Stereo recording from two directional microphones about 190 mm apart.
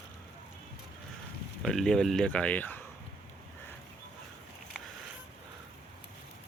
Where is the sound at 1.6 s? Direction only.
Centre (ahead or behind).